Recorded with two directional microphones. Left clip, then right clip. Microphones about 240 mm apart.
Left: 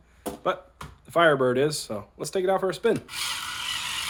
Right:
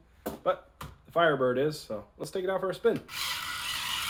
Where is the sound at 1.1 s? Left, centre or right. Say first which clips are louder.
Left 5 dB; left.